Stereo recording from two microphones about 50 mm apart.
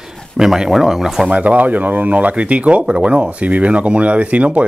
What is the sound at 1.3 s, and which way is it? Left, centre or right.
Speech, right.